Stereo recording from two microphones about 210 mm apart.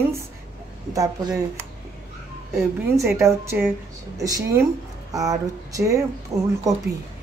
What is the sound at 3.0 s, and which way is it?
Speech, 15° right (ahead or behind).